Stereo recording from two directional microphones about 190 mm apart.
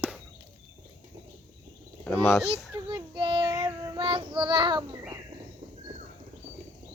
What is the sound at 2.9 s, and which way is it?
Child singing, 25° right (ahead or behind).